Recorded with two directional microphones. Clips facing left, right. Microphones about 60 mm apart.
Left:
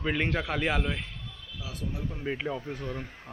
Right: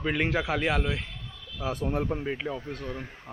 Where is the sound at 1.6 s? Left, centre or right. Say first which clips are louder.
Right 8 dB; right.